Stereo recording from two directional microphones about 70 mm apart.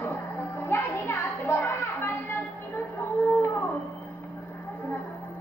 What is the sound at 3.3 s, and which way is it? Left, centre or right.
Howl, left.